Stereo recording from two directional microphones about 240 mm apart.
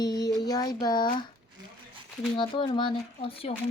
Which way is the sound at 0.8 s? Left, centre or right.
Centre.